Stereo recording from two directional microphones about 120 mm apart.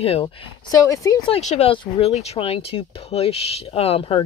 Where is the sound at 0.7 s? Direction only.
25° left (ahead or behind).